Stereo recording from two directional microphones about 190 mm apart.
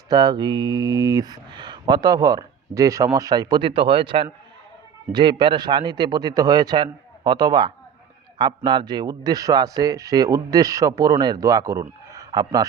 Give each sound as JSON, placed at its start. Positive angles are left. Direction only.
{"t": 0.1, "sound": "speech", "side_deg": -20}